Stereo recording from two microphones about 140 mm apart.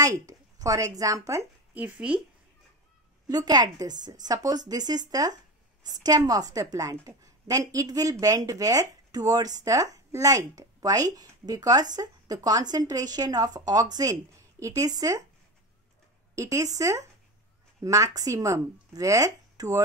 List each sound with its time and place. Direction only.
0.0 s speech: 25° right (ahead or behind); by 2.1 s 10° right (ahead or behind)
3.3 s a woman's voice: 30° right (ahead or behind)
16.3 s a woman's voice: 20° right (ahead or behind)